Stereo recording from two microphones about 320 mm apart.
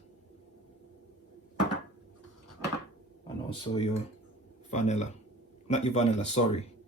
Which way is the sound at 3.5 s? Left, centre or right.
Centre.